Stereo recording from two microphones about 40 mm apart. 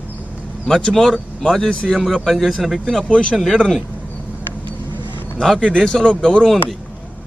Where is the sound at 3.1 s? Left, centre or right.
Left.